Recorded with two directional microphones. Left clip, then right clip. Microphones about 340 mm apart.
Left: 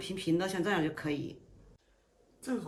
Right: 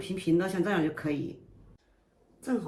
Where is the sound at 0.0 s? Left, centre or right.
Centre.